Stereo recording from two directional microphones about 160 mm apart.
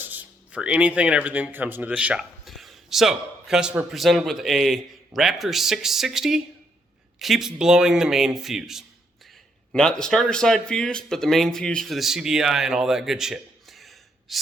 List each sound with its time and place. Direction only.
0.0 s speech: 10° right (ahead or behind)